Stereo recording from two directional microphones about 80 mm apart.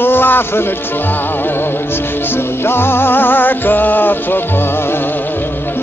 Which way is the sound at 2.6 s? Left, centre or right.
Left.